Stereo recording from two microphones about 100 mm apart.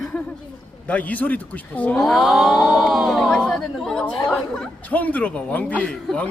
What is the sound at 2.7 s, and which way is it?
Speech, centre (ahead or behind).